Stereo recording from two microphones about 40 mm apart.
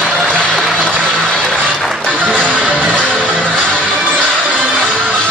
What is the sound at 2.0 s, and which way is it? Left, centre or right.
Music, left.